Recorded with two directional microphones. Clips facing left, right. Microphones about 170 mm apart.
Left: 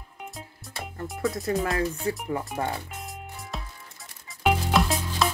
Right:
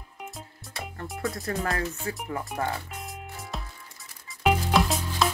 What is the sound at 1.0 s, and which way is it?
Speech, centre (ahead or behind).